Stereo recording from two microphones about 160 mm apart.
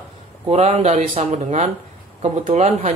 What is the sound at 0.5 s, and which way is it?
Speech, 45° right (ahead or behind).